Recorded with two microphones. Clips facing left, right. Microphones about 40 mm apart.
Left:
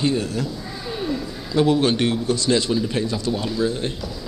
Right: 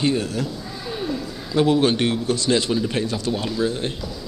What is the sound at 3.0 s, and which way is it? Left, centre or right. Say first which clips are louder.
Speech: even; right.